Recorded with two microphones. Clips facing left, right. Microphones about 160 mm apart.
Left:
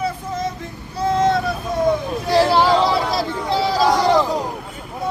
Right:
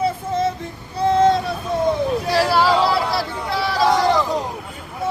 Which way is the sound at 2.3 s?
20° left (ahead or behind).